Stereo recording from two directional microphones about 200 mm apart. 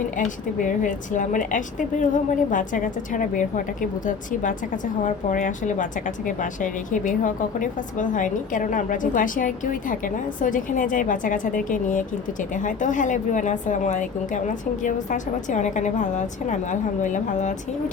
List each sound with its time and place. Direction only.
0.2 s a woman's voice: 40° left (ahead or behind)